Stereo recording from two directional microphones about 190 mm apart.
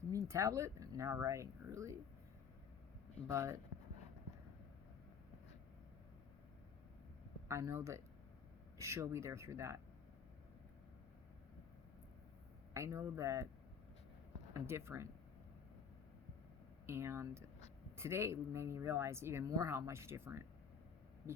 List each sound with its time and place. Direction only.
0.1 s speech: 15° right (ahead or behind)
3.2 s speech: 15° right (ahead or behind)
7.4 s speech: 15° right (ahead or behind)
12.7 s speech: 15° right (ahead or behind)
14.5 s speech: 15° right (ahead or behind)
16.8 s speech: 15° right (ahead or behind)